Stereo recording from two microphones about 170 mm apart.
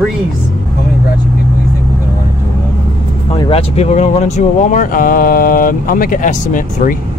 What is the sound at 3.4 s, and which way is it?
Speech, 35° left (ahead or behind).